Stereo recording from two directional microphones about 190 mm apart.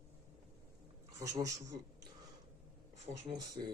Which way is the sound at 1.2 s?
15° right (ahead or behind).